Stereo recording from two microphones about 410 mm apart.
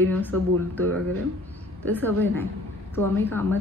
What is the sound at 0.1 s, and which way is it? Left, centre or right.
Speech, centre.